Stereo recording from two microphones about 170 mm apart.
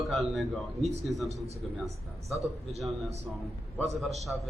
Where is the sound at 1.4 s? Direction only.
40° right (ahead or behind).